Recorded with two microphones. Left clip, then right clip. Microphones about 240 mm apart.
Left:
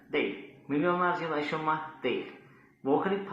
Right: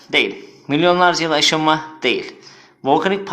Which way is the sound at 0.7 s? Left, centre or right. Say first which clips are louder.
Right 14 dB; right.